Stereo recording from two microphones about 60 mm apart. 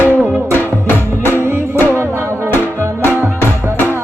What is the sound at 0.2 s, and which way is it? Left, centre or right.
Music, right.